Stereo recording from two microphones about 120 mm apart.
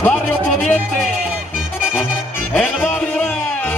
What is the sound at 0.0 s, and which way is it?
Music, 15° left (ahead or behind).